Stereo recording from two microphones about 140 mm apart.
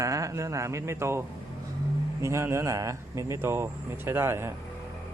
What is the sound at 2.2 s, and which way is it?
Speech, 20° right (ahead or behind).